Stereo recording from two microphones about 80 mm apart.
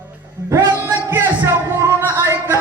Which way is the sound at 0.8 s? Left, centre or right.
Right.